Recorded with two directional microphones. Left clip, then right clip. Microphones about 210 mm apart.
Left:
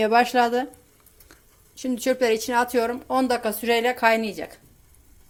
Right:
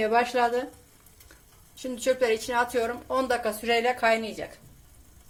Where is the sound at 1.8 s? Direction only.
35° left (ahead or behind).